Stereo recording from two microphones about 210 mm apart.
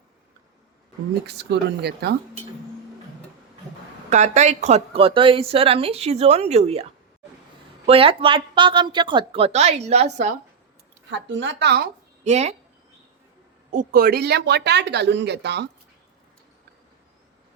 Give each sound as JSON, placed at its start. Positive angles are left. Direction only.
{"t": 1.3, "sound": "speech", "side_deg": -55}
{"t": 4.1, "sound": "a woman's voice", "side_deg": -35}
{"t": 7.9, "sound": "a woman's voice", "side_deg": -25}
{"t": 11.1, "sound": "speech", "side_deg": -60}
{"t": 12.2, "sound": "speech", "side_deg": -30}
{"t": 13.7, "sound": "speech", "side_deg": -40}